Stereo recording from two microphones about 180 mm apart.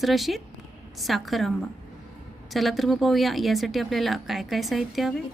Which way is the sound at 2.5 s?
Centre (ahead or behind).